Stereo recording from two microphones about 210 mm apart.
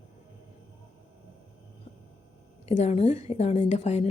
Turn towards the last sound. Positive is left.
turn(degrees=30)  # may be behind; listen again after turning